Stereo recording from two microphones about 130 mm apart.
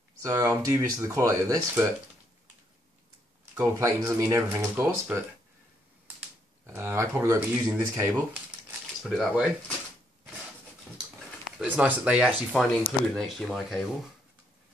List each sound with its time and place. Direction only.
0.2 s speech: 25° right (ahead or behind)
3.5 s speech: 25° right (ahead or behind)
6.6 s speech: 20° right (ahead or behind)
9.2 s speech: 10° right (ahead or behind)
11.0 s speech: 5° right (ahead or behind)